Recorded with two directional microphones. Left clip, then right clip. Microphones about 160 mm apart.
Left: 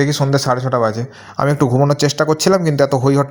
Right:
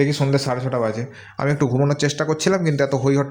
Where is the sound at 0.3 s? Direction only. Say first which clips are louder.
Left 5 dB; 30° left (ahead or behind).